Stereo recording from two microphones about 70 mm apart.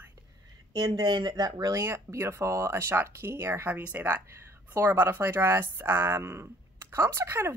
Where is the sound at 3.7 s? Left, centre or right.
Right.